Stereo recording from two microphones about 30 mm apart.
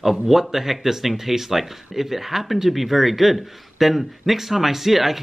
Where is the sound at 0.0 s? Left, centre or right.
Centre.